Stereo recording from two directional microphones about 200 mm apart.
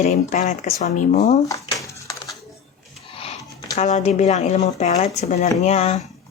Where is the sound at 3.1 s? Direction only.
30° left (ahead or behind).